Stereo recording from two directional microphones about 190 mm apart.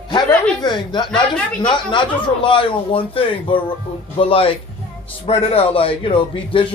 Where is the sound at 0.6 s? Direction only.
25° left (ahead or behind).